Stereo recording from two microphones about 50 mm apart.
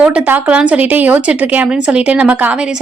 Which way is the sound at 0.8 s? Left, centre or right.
Right.